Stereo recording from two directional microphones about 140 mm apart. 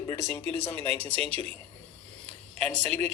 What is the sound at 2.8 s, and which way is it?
Speech, 50° right (ahead or behind).